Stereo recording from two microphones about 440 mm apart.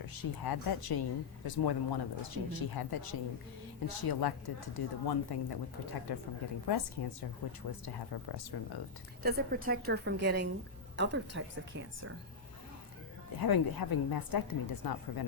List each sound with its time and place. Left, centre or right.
0.0 s a woman's voice: left
9.2 s a woman's voice: right
13.4 s a woman's voice: left